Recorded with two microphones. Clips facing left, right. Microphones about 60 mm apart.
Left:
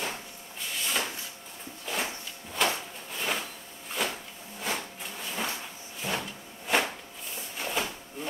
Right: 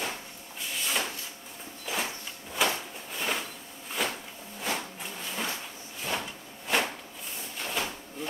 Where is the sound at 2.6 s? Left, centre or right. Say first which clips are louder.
Even; centre.